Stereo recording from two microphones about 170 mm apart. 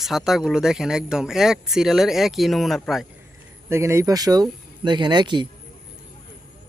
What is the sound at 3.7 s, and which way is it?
Speech, 15° right (ahead or behind).